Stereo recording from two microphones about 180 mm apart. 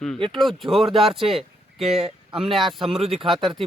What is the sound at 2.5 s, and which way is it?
Speech, centre (ahead or behind).